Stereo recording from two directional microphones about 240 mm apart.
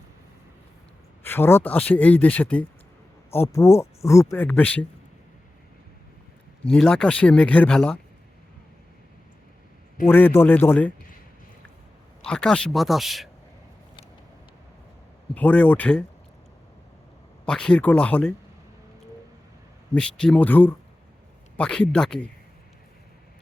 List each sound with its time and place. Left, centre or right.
1.2 s speech: centre
6.7 s speech: centre
10.1 s speech: centre
12.2 s speech: centre
15.4 s speech: centre
17.4 s speech: centre
19.9 s speech: centre